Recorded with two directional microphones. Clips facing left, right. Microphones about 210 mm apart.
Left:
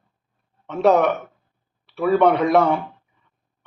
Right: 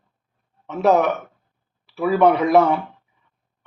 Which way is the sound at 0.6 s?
5° right (ahead or behind).